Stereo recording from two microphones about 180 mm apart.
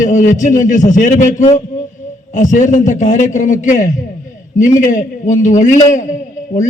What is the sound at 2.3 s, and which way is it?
A man's voice, 45° left (ahead or behind).